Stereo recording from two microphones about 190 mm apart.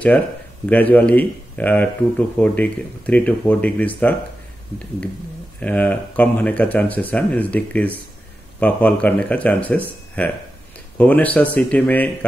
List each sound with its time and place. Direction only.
0.7 s speech: 10° left (ahead or behind)
5.6 s speech: 10° left (ahead or behind)